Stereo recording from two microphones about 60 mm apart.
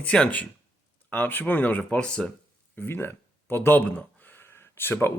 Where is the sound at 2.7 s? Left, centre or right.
Left.